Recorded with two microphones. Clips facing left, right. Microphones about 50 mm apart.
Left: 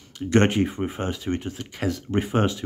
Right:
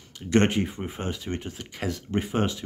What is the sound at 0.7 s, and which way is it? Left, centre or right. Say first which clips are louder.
Speech: left 6 dB; centre.